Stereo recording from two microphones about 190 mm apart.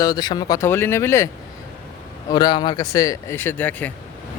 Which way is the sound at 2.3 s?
20° left (ahead or behind).